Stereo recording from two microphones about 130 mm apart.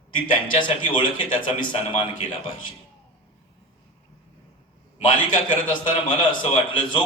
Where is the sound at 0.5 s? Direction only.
40° left (ahead or behind).